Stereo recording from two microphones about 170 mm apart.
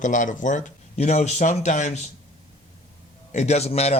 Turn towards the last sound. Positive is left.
turn(degrees=40)  # may be behind; listen again after turning